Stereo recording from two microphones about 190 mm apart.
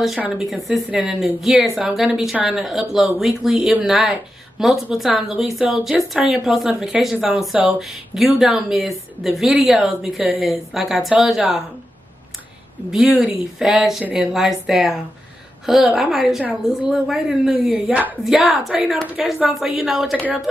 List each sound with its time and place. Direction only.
0.0 s a woman's voice: centre (ahead or behind)
12.9 s a woman's voice: centre (ahead or behind)